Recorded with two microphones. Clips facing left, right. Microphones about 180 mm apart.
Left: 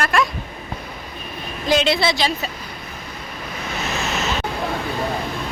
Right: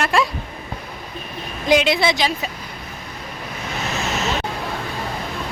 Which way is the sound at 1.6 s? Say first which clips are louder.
Right 1 dB; 15° right (ahead or behind).